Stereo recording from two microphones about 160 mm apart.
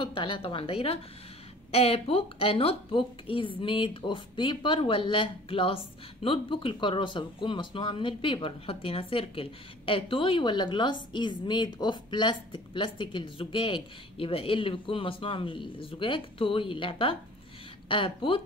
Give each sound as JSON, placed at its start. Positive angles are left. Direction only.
{"t": 0.0, "sound": "speech", "side_deg": 30}